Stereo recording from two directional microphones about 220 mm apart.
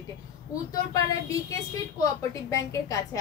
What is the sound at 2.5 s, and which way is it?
Speech, 15° left (ahead or behind).